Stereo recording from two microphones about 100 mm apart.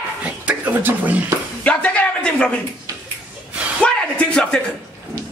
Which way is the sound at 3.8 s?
10° left (ahead or behind).